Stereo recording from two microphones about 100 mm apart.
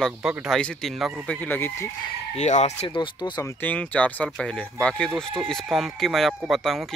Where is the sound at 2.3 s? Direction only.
90° left.